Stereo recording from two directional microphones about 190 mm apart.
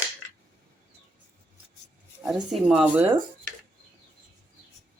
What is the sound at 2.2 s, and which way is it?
Speech, centre (ahead or behind).